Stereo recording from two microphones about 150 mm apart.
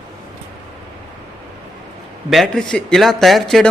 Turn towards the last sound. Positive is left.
turn(degrees=0)  # may be behind; listen again after turning